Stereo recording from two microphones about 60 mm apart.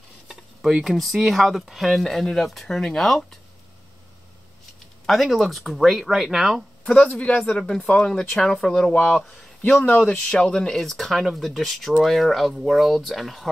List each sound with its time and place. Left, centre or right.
0.3 s stir: centre
0.8 s speech: centre
5.0 s speech: centre
7.4 s speech: centre
8.2 s speech: centre
9.2 s speech: centre
9.8 s speech: left
10.1 s speech: centre